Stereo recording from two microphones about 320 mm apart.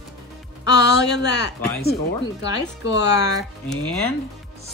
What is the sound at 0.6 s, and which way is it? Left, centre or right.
Speech, left.